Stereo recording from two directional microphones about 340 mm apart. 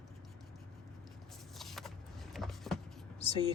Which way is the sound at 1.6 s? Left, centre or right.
Centre.